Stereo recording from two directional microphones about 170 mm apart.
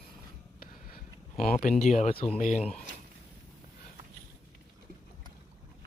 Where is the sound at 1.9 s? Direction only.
40° left (ahead or behind).